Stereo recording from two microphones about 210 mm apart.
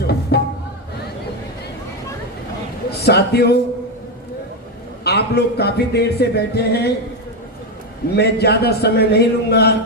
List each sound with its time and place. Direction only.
0.3 s music: 50° left (ahead or behind)
3.0 s speech: 50° left (ahead or behind)
5.0 s speech: 50° left (ahead or behind)
8.1 s speech: 50° left (ahead or behind)